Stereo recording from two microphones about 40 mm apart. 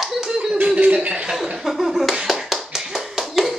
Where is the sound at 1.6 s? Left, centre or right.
Centre.